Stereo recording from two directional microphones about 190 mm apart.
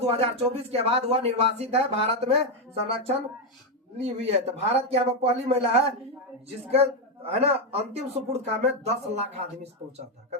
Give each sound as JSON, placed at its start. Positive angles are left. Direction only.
{"t": 0.0, "sound": "speech", "side_deg": -30}
{"t": 7.3, "sound": "speech", "side_deg": -30}